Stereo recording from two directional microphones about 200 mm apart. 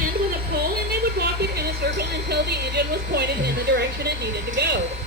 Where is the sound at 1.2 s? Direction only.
55° right (ahead or behind).